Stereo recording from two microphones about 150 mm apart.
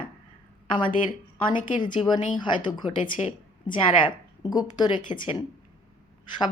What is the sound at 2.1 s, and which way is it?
Speech, 55° left (ahead or behind).